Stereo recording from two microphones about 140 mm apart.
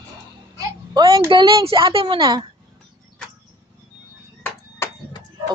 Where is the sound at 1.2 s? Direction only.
35° right (ahead or behind).